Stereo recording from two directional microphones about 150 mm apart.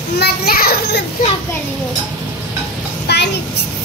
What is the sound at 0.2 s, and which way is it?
Children playing, 90° left.